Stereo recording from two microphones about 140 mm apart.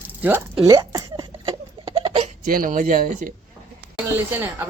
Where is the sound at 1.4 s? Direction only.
40° right (ahead or behind).